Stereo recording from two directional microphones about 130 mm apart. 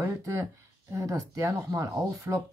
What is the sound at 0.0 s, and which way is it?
Speech, 25° right (ahead or behind).